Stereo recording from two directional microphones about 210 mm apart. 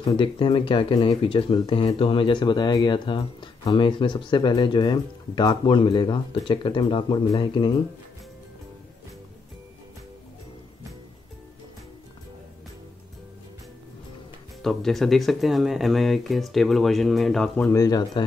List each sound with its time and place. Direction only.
0.0 s speech: 25° left (ahead or behind)
14.6 s speech: centre (ahead or behind)
17.7 s speech: 15° left (ahead or behind)